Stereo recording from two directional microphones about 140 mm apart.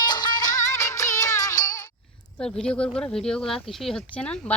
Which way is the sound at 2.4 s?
5° left (ahead or behind).